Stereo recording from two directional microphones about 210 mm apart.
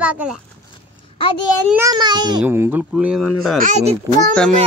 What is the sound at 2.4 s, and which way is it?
A child's voice, 10° right (ahead or behind).